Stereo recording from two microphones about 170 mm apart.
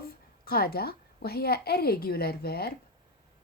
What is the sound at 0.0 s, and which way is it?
A woman's voice, 60° left (ahead or behind).